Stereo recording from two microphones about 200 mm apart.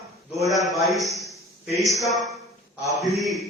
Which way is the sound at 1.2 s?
Centre (ahead or behind).